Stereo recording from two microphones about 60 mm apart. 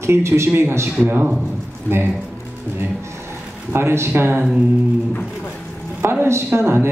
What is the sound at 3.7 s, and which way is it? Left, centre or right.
Speech, right.